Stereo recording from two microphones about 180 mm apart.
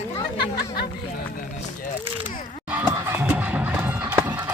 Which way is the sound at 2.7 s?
10° right (ahead or behind).